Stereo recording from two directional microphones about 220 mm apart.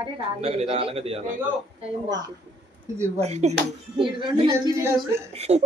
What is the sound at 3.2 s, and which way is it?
A woman's voice, 30° right (ahead or behind).